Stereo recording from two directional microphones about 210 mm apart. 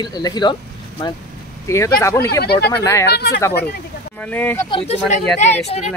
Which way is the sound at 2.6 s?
10° left (ahead or behind).